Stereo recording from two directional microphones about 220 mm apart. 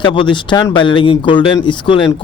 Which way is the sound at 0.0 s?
20° left (ahead or behind).